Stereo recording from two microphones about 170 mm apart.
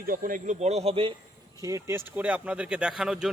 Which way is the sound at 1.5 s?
20° right (ahead or behind).